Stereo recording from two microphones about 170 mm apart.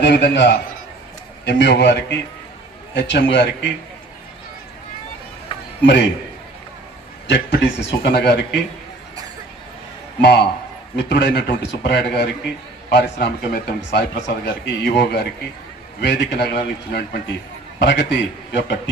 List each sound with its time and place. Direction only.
0.0 s a man's voice: 90° left
5.8 s speech: 90° left
7.3 s speech: 90° left
10.2 s speech: 80° left
17.7 s speech: 90° left